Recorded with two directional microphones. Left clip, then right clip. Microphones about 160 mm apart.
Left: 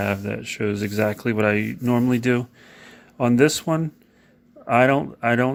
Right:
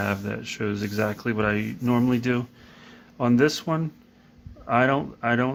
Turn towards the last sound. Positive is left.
turn(degrees=30)  # may be behind; listen again after turning